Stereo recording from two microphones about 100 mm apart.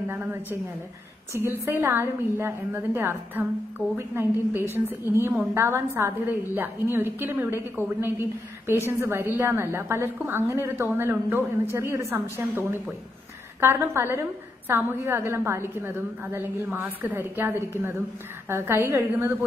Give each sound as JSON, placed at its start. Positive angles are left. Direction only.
{"t": 0.1, "sound": "a woman's voice", "side_deg": -25}